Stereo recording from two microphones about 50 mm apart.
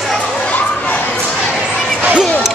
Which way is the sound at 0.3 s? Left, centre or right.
Left.